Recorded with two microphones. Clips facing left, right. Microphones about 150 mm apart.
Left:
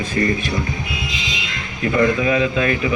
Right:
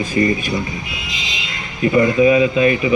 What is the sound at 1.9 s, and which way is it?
A man's voice, 10° right (ahead or behind).